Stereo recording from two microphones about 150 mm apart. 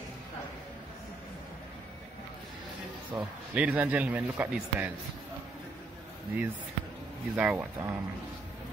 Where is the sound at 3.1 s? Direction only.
10° right (ahead or behind).